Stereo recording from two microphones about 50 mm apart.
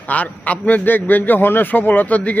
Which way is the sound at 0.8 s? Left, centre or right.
Left.